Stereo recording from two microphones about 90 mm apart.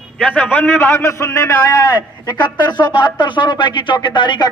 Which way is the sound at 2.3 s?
55° left (ahead or behind).